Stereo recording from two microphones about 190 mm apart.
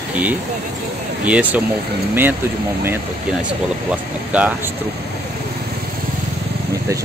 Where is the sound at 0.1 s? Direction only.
10° right (ahead or behind).